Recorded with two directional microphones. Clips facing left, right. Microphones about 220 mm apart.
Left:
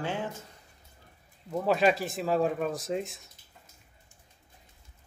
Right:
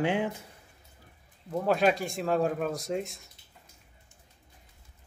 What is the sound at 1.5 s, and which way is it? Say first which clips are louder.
Speech: even; centre (ahead or behind).